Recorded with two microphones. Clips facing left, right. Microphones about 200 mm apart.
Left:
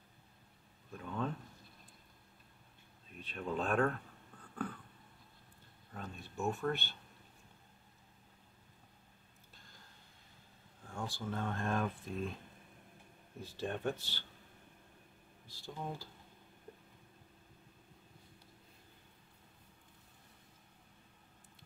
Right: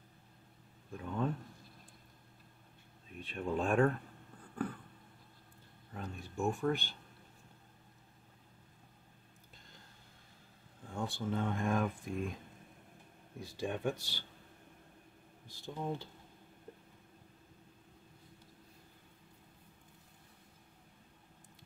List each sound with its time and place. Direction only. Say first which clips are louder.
0.9 s speech: right 3 dB; 15° right (ahead or behind)
3.2 s speech: right 3 dB; 10° right (ahead or behind)
5.9 s a sound: right 3 dB; 15° right (ahead or behind)
11.0 s speech: right 4 dB; 20° right (ahead or behind)
13.4 s speech: right 2 dB; 10° right (ahead or behind)
15.4 s speech: right 4 dB; 20° right (ahead or behind)